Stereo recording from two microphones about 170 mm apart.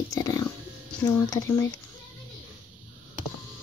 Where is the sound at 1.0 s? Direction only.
20° left (ahead or behind).